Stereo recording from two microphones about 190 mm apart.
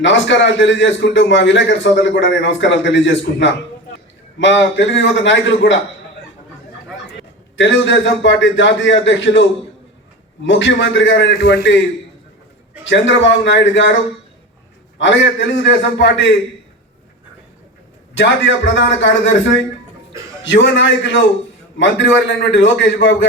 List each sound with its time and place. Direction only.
0.0 s a man's voice: 75° left (ahead or behind)
7.5 s a man's voice: 75° left (ahead or behind)
12.8 s a man's voice: 70° left (ahead or behind)
14.9 s a man's voice: 75° left (ahead or behind)
18.2 s a man's voice: 75° left (ahead or behind)